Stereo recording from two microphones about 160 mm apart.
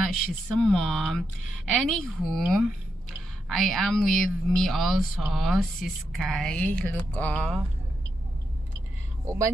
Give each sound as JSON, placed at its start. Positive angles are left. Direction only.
{"t": 0.6, "sound": "speech", "side_deg": 5}
{"t": 9.2, "sound": "speech", "side_deg": -20}